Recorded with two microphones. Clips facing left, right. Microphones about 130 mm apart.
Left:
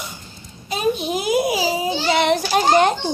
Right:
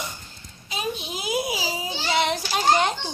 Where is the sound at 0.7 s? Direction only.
50° left (ahead or behind).